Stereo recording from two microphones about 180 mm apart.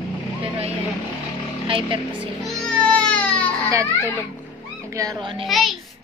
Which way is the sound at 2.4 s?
5° left (ahead or behind).